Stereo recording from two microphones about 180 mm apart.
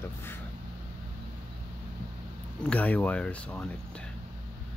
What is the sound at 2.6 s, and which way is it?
Speech, 5° left (ahead or behind).